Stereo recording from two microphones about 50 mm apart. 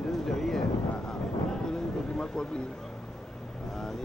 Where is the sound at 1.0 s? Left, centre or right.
Centre.